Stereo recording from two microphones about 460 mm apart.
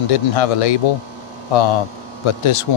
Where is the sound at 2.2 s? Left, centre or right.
Left.